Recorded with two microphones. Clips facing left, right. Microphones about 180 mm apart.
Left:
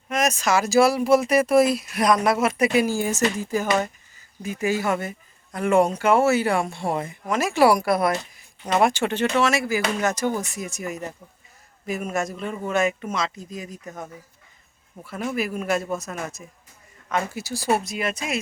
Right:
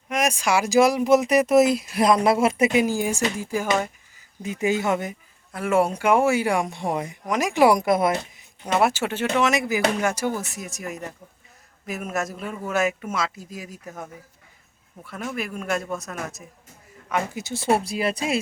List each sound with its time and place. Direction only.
0.1 s speech: 10° right (ahead or behind)
4.4 s speech: 20° right (ahead or behind)
5.5 s speech: 5° right (ahead or behind); by 8.4 s 20° right (ahead or behind)
8.6 s speech: 5° right (ahead or behind)
9.4 s speech: 20° right (ahead or behind); by 16.4 s centre (ahead or behind)
17.1 s speech: 15° right (ahead or behind); by 18.3 s 30° right (ahead or behind)